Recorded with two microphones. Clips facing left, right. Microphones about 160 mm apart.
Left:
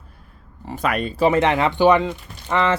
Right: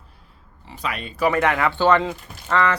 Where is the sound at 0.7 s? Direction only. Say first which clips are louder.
Left 7 dB; 50° left (ahead or behind).